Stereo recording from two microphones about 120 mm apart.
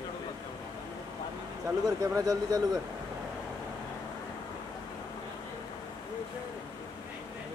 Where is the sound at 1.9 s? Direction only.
30° right (ahead or behind).